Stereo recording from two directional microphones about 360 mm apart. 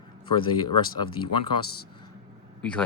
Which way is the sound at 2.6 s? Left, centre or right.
Centre.